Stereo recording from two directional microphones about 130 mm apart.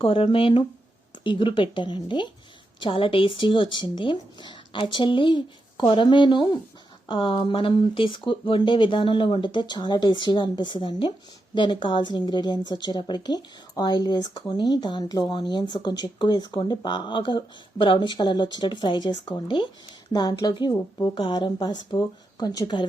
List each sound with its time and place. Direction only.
0.0 s speech: 45° left (ahead or behind)